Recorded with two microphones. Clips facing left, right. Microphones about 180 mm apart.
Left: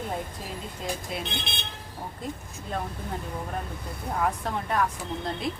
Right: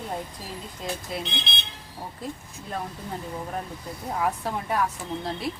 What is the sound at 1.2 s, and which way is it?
Speech, 50° left (ahead or behind).